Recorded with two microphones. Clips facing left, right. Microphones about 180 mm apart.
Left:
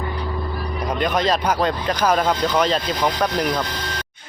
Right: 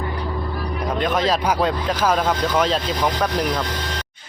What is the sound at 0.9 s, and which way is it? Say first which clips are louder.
Speech: even; centre (ahead or behind).